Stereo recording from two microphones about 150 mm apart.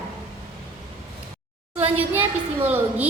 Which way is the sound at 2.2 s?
10° right (ahead or behind).